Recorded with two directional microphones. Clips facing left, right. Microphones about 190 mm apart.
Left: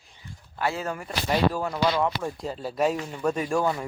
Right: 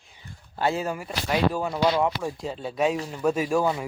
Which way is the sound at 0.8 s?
10° right (ahead or behind).